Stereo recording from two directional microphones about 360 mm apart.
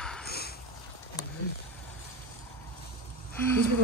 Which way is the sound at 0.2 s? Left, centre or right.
Left.